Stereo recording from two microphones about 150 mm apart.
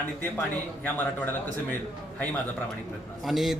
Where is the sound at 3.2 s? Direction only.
Centre (ahead or behind).